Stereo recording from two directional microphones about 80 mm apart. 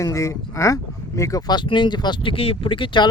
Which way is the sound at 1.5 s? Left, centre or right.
Left.